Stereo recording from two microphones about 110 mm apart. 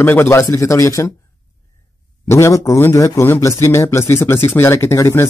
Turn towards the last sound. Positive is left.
turn(degrees=25)  # may be behind; listen again after turning